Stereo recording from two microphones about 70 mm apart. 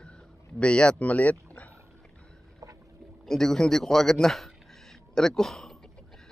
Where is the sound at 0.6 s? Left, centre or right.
Centre.